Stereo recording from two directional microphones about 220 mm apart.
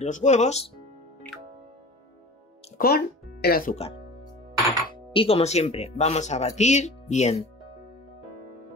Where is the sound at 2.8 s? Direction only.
40° left (ahead or behind).